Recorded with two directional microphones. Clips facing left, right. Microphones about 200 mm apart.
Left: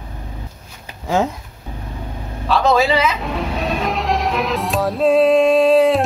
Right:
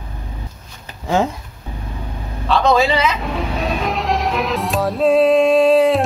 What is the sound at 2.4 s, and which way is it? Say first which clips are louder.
Music: even; 5° left (ahead or behind).